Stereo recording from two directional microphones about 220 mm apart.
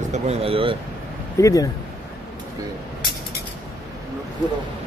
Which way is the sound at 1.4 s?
15° left (ahead or behind).